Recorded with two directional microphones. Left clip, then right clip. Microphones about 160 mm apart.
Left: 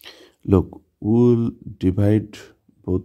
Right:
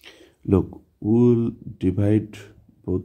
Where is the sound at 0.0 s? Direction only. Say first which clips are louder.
Left 1 dB; 30° left (ahead or behind).